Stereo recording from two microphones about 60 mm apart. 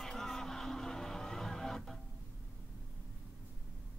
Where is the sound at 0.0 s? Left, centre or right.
Centre.